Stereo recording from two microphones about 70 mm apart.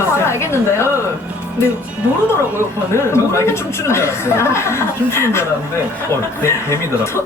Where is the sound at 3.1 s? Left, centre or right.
Left.